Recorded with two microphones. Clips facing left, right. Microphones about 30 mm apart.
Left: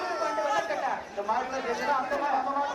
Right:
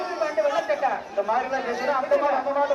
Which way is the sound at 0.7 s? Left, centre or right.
Centre.